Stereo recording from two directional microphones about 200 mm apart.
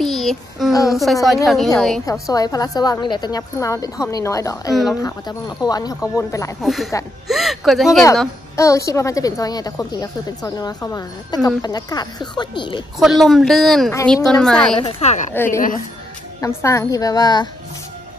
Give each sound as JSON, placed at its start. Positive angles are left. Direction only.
{"t": 0.0, "sound": "child singing", "side_deg": 0}
{"t": 0.8, "sound": "a woman's voice", "side_deg": 0}
{"t": 2.2, "sound": "a woman's voice", "side_deg": 20}
{"t": 6.6, "sound": "a woman's voice", "side_deg": 0}
{"t": 8.5, "sound": "a woman's voice", "side_deg": 15}
{"t": 13.2, "sound": "a woman's voice", "side_deg": 0}
{"t": 14.8, "sound": "speech", "side_deg": 30}
{"t": 15.3, "sound": "speech", "side_deg": 10}